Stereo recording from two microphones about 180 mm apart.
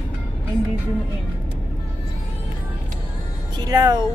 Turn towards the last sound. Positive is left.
turn(degrees=-20)  # may be behind; listen again after turning